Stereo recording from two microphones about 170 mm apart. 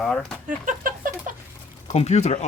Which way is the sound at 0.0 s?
Centre (ahead or behind).